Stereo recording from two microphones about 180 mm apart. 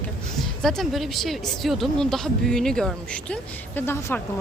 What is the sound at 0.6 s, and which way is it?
Speech, centre (ahead or behind).